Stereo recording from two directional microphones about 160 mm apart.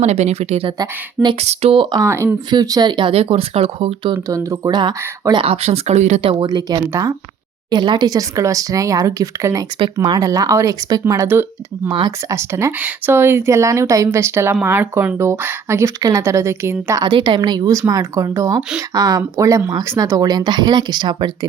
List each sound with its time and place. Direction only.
0.0 s speech: 45° right (ahead or behind)
0.8 s speech: 25° right (ahead or behind)
1.4 s speech: 40° right (ahead or behind)
4.3 s speech: 20° right (ahead or behind); by 6.3 s 45° right (ahead or behind)
6.4 s speech: 25° right (ahead or behind)
11.9 s speech: 30° right (ahead or behind)
12.3 s speech: 15° right (ahead or behind)